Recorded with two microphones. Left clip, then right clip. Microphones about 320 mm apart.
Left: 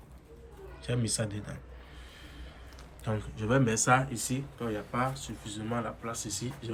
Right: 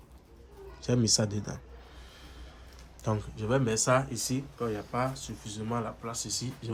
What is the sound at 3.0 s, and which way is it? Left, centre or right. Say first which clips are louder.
Speech: right 2 dB; centre.